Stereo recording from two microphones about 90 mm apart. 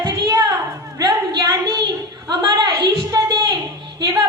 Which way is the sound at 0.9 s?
45° right (ahead or behind).